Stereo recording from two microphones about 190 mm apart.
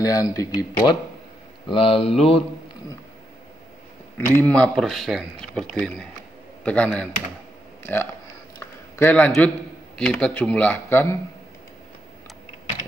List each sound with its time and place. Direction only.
0.0 s speech: 15° left (ahead or behind)
1.7 s speech: 30° left (ahead or behind)
4.4 s speech: 5° left (ahead or behind)
8.5 s a sound: 10° left (ahead or behind)
9.9 s speech: 5° left (ahead or behind)